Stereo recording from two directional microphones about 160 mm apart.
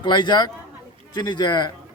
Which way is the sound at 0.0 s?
30° left (ahead or behind).